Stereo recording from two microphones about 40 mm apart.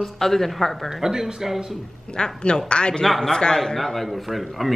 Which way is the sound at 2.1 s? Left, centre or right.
Centre.